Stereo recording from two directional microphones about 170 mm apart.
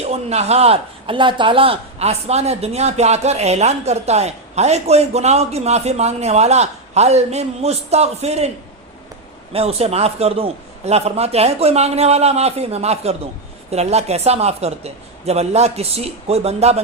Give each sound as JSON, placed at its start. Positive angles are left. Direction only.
{"t": 0.0, "sound": "a man's voice", "side_deg": -40}
{"t": 9.5, "sound": "a man's voice", "side_deg": -35}